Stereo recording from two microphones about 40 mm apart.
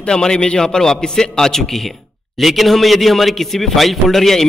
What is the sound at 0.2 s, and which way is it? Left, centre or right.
A man's voice, left.